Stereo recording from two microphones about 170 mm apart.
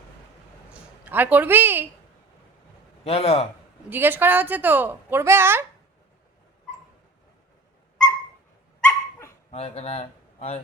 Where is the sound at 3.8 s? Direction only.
10° right (ahead or behind).